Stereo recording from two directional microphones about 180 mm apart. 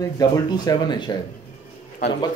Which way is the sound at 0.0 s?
20° left (ahead or behind).